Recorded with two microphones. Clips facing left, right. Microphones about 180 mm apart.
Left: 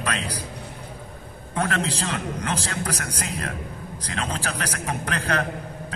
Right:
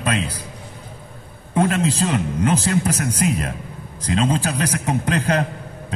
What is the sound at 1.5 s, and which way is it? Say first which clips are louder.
A man's voice: right 7 dB; 25° right (ahead or behind).